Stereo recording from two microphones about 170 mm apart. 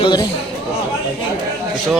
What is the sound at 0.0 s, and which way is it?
Speech, 25° left (ahead or behind).